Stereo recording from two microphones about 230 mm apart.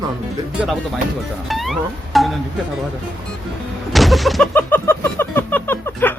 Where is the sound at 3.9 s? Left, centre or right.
Centre.